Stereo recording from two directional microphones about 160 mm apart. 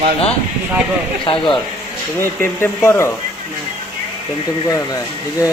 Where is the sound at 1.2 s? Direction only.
30° left (ahead or behind).